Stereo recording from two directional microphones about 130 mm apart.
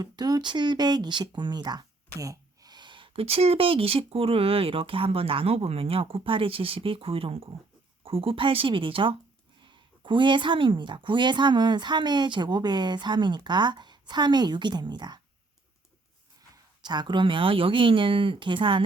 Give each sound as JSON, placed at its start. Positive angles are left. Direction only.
{"t": 0.0, "sound": "speech", "side_deg": -30}
{"t": 16.8, "sound": "speech", "side_deg": -35}